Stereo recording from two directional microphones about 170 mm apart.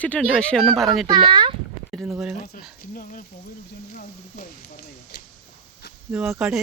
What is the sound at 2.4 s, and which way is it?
Speech, 50° left (ahead or behind).